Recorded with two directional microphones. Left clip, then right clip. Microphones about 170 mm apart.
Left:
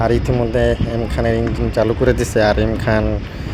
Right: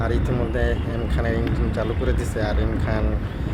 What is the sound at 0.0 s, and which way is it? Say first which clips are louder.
Speech: left 8 dB; 35° left (ahead or behind).